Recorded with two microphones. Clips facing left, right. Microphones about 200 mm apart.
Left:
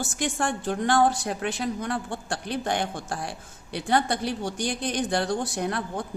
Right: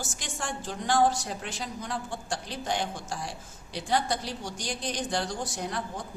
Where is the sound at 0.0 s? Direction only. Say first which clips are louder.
Left 9 dB; 60° left (ahead or behind).